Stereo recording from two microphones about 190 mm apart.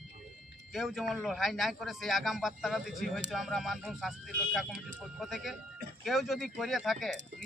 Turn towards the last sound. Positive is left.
turn(degrees=0)  # may be behind; listen again after turning